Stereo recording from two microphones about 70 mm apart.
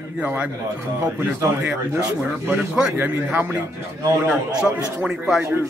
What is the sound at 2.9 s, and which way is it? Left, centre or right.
Speech, right.